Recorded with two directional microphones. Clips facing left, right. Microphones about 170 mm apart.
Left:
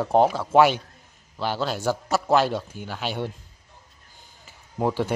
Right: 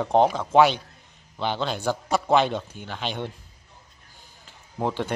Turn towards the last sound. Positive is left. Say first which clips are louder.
# left 3 dB
turn(degrees=10)  # may be behind; listen again after turning